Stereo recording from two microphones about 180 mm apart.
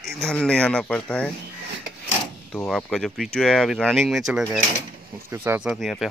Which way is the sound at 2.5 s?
5° left (ahead or behind).